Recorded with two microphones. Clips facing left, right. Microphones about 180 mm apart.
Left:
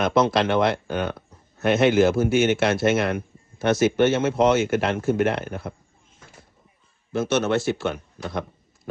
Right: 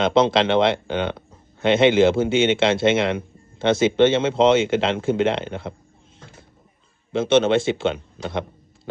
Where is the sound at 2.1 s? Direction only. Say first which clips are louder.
Right 1 dB; 25° right (ahead or behind).